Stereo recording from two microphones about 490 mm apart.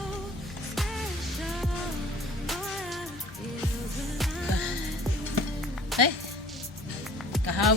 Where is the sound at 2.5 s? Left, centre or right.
Centre.